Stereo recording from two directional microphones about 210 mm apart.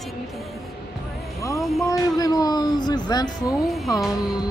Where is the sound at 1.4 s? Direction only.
15° left (ahead or behind).